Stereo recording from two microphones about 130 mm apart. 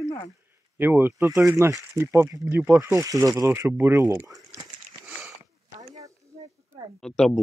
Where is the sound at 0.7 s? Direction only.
15° right (ahead or behind).